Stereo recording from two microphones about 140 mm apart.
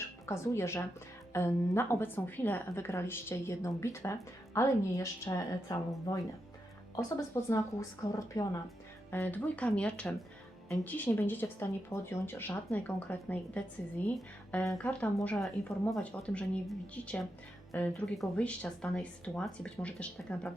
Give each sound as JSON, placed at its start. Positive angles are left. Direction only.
{"t": 0.3, "sound": "a woman's voice", "side_deg": 20}